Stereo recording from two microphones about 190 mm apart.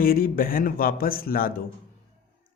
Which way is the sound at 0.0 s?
50° left (ahead or behind).